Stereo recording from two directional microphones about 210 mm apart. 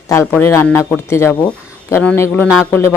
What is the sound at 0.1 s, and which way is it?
Speech, 10° left (ahead or behind).